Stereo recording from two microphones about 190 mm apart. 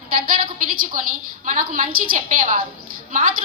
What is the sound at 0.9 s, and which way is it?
A woman's voice, 45° right (ahead or behind).